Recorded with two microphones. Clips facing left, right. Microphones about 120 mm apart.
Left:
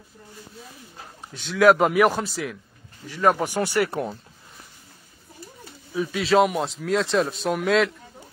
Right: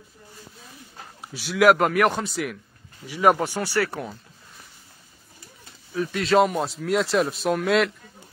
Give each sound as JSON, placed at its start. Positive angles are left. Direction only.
{"t": 1.3, "sound": "speech", "side_deg": -5}
{"t": 3.1, "sound": "speech", "side_deg": -10}
{"t": 3.6, "sound": "speech", "side_deg": 20}
{"t": 5.9, "sound": "speech", "side_deg": 0}